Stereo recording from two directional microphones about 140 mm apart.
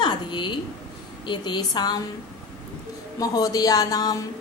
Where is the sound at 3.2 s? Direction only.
25° left (ahead or behind).